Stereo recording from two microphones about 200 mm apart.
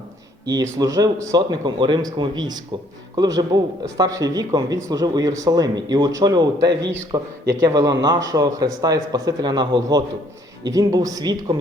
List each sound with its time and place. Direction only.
0.4 s speech: 20° right (ahead or behind)